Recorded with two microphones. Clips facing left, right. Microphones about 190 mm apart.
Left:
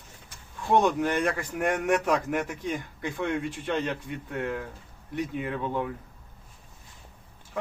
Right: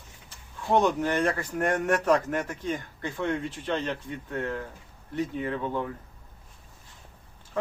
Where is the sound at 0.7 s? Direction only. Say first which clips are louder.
Even; 15° left (ahead or behind).